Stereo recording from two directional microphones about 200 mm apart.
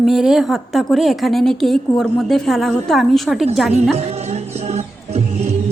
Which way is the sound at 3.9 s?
35° right (ahead or behind).